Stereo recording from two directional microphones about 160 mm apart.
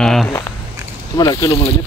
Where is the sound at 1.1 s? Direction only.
25° left (ahead or behind).